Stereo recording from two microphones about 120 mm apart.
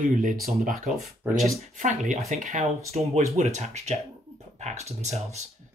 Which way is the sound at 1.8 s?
90° right.